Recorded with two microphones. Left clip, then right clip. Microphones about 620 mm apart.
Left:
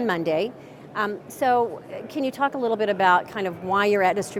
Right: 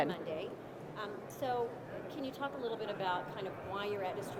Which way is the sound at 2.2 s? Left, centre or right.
Left.